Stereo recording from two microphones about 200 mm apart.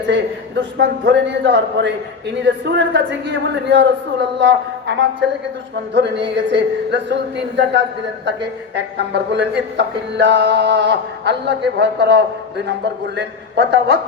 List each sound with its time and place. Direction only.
0.1 s music: 60° right (ahead or behind)